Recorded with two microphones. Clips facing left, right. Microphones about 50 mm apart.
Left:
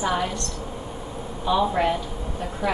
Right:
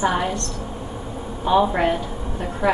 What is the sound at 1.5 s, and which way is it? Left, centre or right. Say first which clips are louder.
Speech: right 3 dB; right.